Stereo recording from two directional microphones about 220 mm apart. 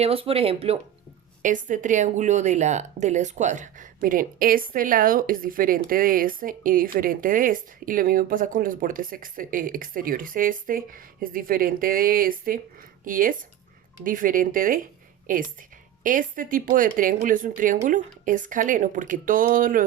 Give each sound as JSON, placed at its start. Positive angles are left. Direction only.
{"t": 0.0, "sound": "speech", "side_deg": -25}